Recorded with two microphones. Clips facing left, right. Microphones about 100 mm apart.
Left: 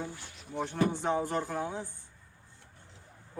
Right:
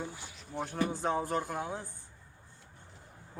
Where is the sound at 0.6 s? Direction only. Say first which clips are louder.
Left 2 dB; centre (ahead or behind).